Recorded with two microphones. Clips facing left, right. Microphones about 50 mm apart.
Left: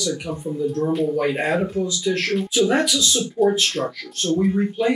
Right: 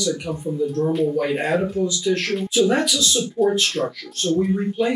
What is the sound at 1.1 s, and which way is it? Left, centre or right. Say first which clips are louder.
Speech: even; centre.